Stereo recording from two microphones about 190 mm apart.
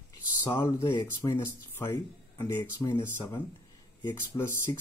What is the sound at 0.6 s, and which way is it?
Speech, 25° left (ahead or behind).